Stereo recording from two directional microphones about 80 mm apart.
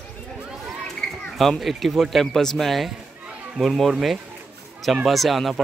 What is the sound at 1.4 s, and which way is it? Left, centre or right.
Speech, centre.